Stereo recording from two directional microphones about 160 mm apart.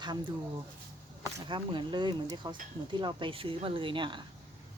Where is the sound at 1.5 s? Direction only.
30° right (ahead or behind).